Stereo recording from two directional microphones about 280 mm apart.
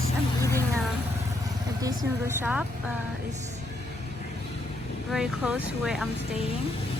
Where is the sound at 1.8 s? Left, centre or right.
Centre.